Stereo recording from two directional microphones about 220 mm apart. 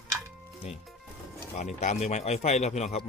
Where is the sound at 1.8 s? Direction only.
30° left (ahead or behind).